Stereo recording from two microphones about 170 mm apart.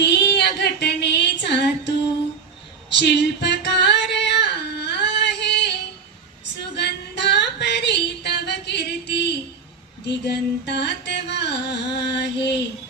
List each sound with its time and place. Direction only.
0.0 s female singing: 80° left
3.0 s singing: 85° left
5.4 s female singing: 80° left
6.7 s music: 85° left
10.1 s carnatic music: 80° left